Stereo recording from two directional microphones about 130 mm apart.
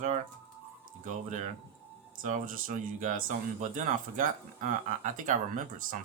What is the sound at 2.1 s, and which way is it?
Speech, 90° right.